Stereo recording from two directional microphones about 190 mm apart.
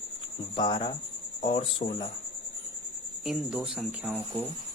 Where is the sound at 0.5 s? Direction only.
25° left (ahead or behind).